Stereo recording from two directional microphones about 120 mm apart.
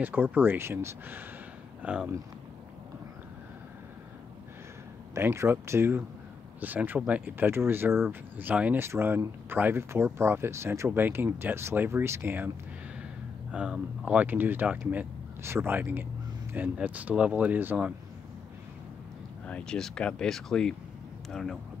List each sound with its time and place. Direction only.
0.0 s speech: 15° right (ahead or behind)
5.1 s speech: 20° right (ahead or behind)
13.5 s speech: 5° right (ahead or behind)
19.4 s speech: 10° left (ahead or behind)